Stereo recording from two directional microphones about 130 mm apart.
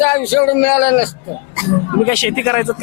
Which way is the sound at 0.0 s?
15° left (ahead or behind).